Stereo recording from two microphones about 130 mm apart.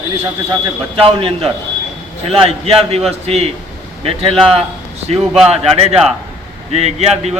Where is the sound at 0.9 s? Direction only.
45° right (ahead or behind).